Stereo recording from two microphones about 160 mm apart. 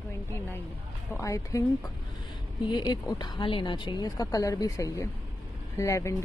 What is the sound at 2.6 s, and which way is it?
Speech, 30° left (ahead or behind).